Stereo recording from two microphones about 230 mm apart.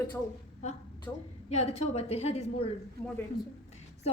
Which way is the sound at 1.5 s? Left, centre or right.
Left.